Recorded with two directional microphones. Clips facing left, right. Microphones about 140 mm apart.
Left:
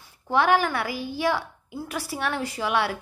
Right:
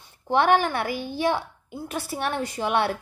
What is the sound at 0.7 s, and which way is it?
Speech, 55° right (ahead or behind).